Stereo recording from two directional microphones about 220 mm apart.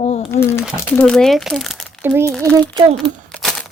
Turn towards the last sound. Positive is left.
turn(degrees=5)  # may be behind; listen again after turning